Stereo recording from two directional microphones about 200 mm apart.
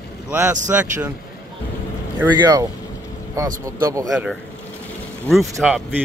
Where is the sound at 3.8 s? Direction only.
15° right (ahead or behind).